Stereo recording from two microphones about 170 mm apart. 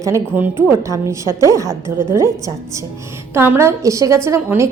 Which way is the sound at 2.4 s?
20° right (ahead or behind).